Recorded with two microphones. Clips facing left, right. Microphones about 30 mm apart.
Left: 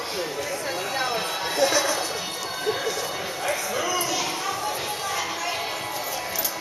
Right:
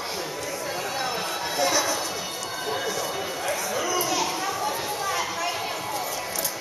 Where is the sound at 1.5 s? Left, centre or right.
Centre.